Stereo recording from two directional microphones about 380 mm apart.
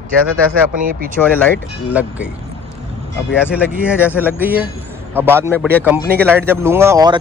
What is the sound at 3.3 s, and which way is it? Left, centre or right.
Speech, centre.